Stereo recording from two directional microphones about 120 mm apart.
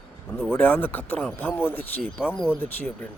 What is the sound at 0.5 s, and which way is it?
Speech, 15° left (ahead or behind).